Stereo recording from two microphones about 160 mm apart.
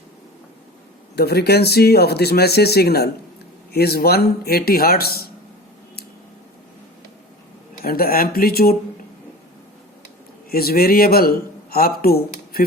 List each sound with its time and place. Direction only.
1.1 s a man's voice: 90° left; by 5.3 s 75° left (ahead or behind)
7.9 s a man's voice: 70° left (ahead or behind)
10.5 s speech: 70° left (ahead or behind)